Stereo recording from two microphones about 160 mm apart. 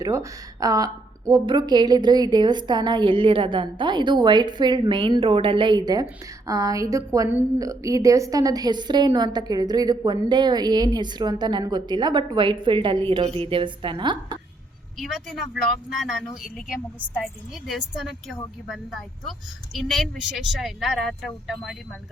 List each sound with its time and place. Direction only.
0.0 s a woman's voice: 20° right (ahead or behind)
14.9 s speech: centre (ahead or behind)